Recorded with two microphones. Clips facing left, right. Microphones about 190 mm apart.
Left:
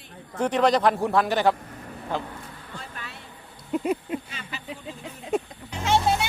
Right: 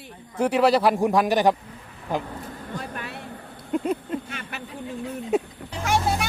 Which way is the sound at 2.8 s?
55° right (ahead or behind).